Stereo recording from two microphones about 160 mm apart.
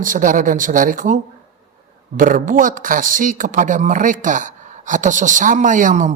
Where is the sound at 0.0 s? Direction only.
55° right (ahead or behind).